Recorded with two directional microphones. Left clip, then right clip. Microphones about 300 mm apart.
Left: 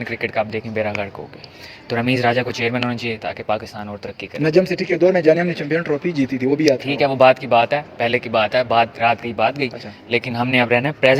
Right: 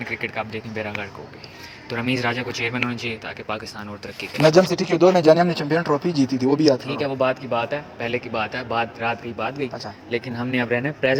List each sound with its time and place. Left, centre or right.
0.0 s a man's voice: left
4.8 s speech: centre
7.0 s a man's voice: left